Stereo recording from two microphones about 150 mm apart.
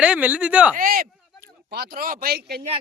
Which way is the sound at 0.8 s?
75° right (ahead or behind).